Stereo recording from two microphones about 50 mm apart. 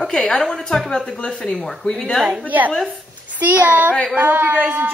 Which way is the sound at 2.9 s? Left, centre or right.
Right.